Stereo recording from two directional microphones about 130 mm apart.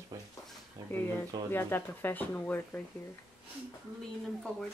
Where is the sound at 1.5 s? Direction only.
15° left (ahead or behind).